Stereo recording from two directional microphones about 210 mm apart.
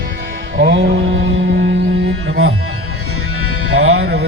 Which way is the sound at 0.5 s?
50° right (ahead or behind).